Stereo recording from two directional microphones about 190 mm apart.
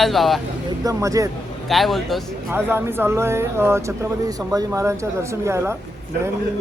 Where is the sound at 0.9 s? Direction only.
15° right (ahead or behind).